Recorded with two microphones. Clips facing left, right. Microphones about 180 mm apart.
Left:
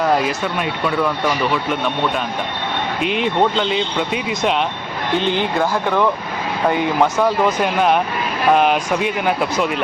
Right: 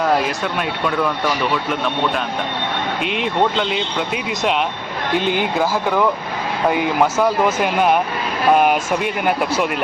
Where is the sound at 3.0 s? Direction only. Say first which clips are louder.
Left 2 dB; centre (ahead or behind).